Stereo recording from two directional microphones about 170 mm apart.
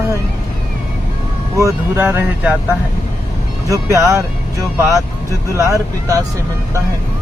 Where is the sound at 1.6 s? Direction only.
15° right (ahead or behind).